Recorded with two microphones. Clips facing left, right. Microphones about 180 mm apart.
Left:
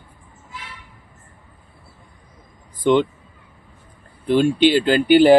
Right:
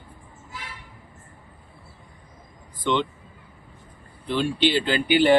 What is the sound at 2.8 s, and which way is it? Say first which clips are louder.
Speech: left 8 dB; 45° left (ahead or behind).